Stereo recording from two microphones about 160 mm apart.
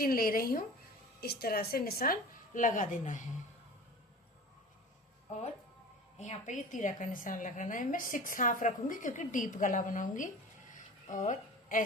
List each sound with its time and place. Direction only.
0.0 s a woman's voice: 65° left (ahead or behind)
1.2 s a woman's voice: 75° left (ahead or behind); by 3.2 s 50° left (ahead or behind)
6.1 s a woman's voice: 45° left (ahead or behind)